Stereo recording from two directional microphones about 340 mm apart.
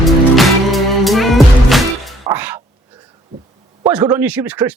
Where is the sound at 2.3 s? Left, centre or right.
Centre.